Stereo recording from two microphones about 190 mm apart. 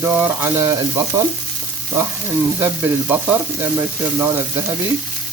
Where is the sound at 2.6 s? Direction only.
10° right (ahead or behind).